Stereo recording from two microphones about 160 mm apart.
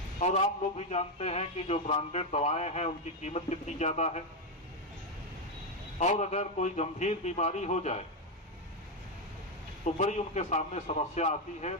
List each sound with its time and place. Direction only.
0.2 s a man's voice: 45° left (ahead or behind)
5.9 s a man's voice: 45° left (ahead or behind)
9.8 s a man's voice: 45° left (ahead or behind)